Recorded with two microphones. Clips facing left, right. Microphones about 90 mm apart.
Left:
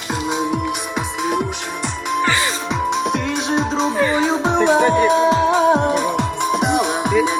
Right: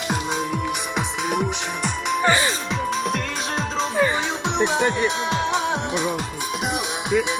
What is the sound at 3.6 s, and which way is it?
Music, 30° left (ahead or behind).